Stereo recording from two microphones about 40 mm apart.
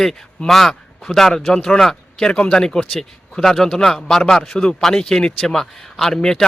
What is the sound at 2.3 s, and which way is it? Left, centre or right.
A man's voice, left.